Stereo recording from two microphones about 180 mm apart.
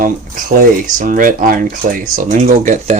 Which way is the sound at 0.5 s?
50° right (ahead or behind).